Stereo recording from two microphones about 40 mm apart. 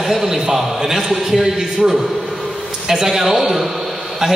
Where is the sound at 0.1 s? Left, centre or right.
Centre.